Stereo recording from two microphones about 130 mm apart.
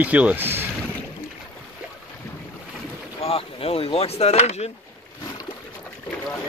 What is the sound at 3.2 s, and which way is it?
Speech, 45° left (ahead or behind).